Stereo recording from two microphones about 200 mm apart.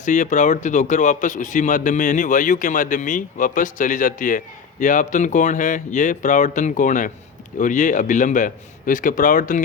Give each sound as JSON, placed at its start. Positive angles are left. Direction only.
{"t": 0.0, "sound": "a man's voice", "side_deg": 40}